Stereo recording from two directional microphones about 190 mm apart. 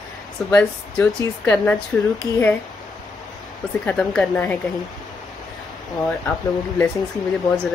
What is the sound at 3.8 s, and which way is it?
Speech, 5° left (ahead or behind).